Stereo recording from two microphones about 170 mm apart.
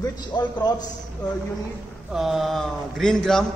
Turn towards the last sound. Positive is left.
turn(degrees=5)  # may be behind; listen again after turning